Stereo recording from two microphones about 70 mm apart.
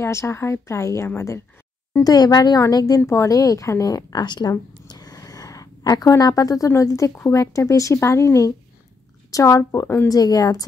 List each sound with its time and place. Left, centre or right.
0.0 s speech: left
2.0 s speech: left
3.1 s a woman's voice: left
6.7 s speech: left
10.0 s speech: left